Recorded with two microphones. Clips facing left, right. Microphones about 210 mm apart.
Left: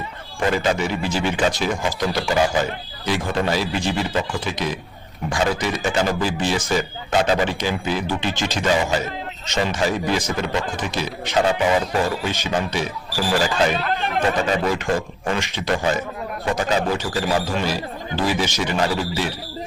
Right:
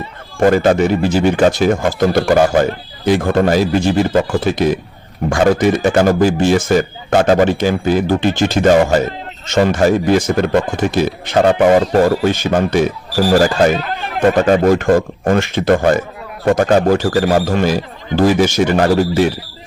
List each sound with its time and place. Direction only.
0.3 s speech: 50° right (ahead or behind)
17.1 s speech: 60° right (ahead or behind)
17.5 s speech: 50° right (ahead or behind)